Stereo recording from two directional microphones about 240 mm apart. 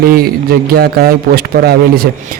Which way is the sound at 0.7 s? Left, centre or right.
Right.